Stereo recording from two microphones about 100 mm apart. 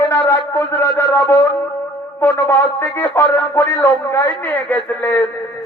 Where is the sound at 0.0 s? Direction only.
30° left (ahead or behind).